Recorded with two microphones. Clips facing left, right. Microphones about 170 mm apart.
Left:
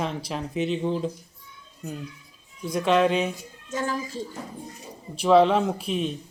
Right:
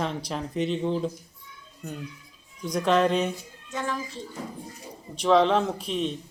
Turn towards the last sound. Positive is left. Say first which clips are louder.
# left 2 dB
turn(degrees=5)  # may be behind; listen again after turning